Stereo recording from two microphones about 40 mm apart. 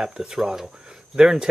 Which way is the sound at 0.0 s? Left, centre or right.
Centre.